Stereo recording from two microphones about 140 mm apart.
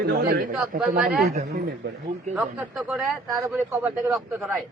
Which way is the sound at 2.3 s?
Centre (ahead or behind).